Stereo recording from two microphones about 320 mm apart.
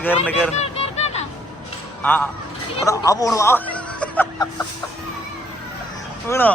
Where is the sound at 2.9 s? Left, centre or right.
Centre.